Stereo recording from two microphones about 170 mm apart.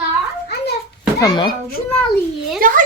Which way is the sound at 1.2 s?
25° left (ahead or behind).